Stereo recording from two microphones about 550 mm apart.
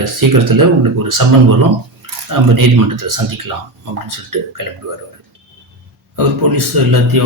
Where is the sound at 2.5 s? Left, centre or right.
Right.